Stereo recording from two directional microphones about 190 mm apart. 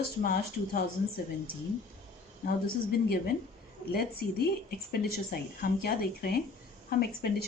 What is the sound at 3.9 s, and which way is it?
A woman's voice, 55° left (ahead or behind).